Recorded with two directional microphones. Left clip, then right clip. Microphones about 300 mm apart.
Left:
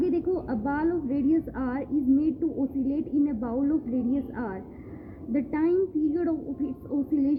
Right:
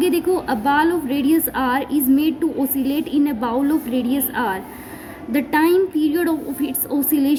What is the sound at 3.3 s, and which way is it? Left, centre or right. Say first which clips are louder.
A woman's voice: right 8 dB; centre.